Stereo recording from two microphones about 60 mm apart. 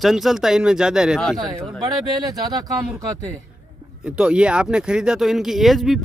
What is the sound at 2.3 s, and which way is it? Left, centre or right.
Speech, right.